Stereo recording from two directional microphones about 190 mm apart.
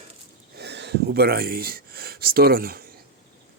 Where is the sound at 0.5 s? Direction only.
60° right (ahead or behind).